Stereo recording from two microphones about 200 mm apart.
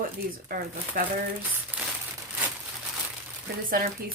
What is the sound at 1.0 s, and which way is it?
Speech, 45° right (ahead or behind).